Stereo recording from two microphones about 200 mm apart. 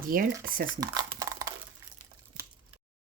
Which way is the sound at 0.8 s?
20° right (ahead or behind).